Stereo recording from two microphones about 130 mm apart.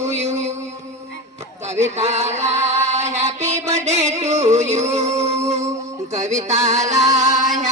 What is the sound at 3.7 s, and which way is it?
Music, 55° right (ahead or behind).